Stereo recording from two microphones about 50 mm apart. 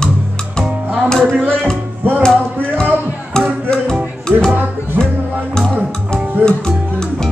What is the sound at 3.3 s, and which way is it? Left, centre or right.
Music, centre.